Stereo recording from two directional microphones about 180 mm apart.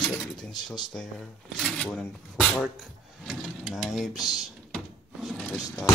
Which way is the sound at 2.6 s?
Centre (ahead or behind).